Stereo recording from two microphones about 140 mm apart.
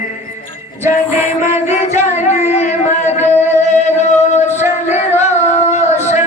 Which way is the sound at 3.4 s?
55° left (ahead or behind).